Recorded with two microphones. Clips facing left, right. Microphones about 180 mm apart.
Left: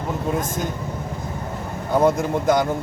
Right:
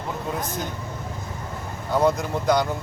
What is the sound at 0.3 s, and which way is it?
Speech, 45° left (ahead or behind).